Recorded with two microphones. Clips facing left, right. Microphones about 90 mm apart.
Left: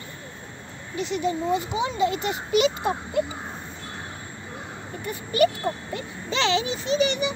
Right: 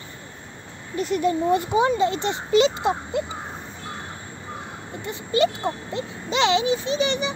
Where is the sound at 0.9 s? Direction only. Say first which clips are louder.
Right 4 dB; 45° right (ahead or behind).